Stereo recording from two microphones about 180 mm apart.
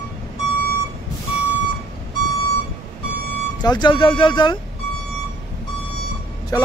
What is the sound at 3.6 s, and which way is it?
Speech, 25° left (ahead or behind).